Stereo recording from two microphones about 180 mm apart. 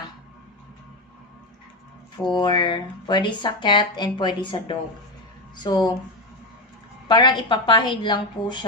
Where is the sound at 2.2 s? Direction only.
25° left (ahead or behind).